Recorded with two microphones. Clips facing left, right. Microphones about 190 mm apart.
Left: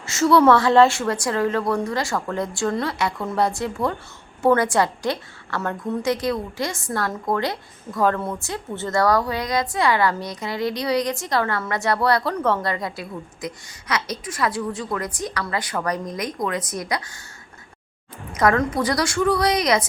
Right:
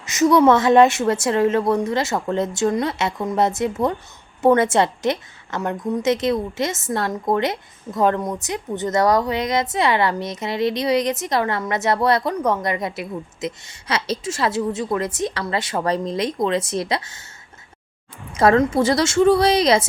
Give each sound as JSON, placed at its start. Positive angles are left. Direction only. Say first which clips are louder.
{"t": 0.0, "sound": "a woman's voice", "louder": "right 1 dB", "side_deg": -20}
{"t": 18.3, "sound": "a woman's voice", "louder": "right 4 dB", "side_deg": -25}